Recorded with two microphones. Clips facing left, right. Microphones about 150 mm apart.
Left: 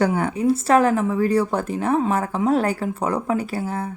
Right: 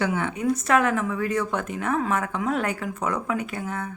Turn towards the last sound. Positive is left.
turn(degrees=30)  # may be behind; listen again after turning